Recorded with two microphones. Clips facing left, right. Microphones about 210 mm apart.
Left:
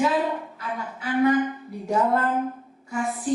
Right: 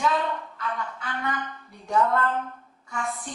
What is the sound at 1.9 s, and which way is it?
Speech, 30° left (ahead or behind).